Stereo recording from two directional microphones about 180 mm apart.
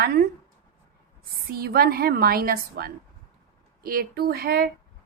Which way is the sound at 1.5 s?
55° right (ahead or behind).